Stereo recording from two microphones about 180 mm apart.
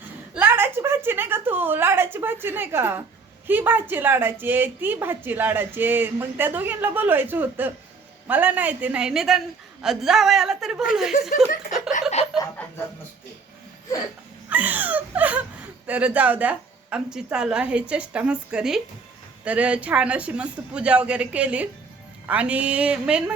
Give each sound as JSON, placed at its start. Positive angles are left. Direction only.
{"t": 0.3, "sound": "a woman's voice", "side_deg": -10}
{"t": 11.1, "sound": "speech", "side_deg": 55}
{"t": 12.2, "sound": "snicker", "side_deg": 35}
{"t": 14.5, "sound": "a woman's voice", "side_deg": -10}